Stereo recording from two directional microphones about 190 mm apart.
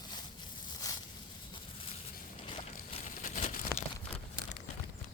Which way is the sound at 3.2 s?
45° left (ahead or behind).